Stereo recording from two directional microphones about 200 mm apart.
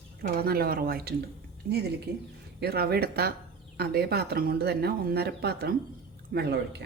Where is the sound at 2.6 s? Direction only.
55° right (ahead or behind).